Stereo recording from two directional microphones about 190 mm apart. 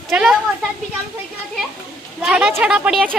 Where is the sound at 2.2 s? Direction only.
5° right (ahead or behind).